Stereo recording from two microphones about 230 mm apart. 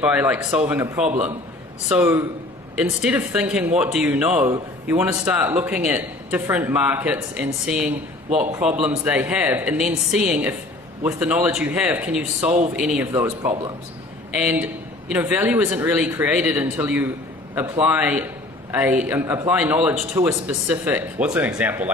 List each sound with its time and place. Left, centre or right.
0.0 s speech: centre